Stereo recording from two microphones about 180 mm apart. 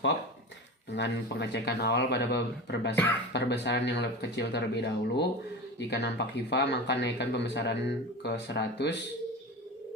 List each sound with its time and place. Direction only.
0.9 s speech: 70° left (ahead or behind)
2.9 s speech: 10° left (ahead or behind)
3.3 s speech: 70° left (ahead or behind)